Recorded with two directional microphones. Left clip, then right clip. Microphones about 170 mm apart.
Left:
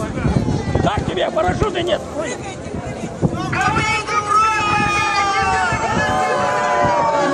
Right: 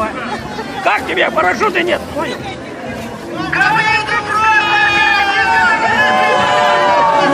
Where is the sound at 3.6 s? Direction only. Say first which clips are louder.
Right 6 dB; 50° left (ahead or behind).